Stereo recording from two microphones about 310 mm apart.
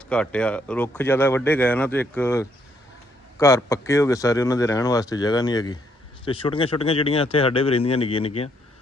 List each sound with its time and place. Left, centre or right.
0.1 s speech: centre